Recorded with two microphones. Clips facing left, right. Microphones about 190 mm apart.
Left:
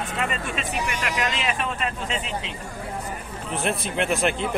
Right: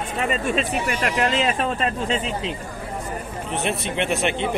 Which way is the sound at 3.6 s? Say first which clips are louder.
Right 1 dB; centre (ahead or behind).